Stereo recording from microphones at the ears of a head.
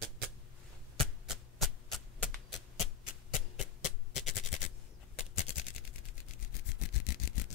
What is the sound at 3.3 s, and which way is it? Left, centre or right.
Music, left.